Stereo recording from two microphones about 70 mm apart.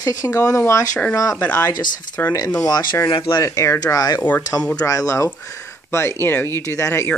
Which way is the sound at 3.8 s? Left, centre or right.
Left.